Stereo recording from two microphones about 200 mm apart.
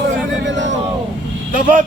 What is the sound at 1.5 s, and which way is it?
Speech, 40° right (ahead or behind).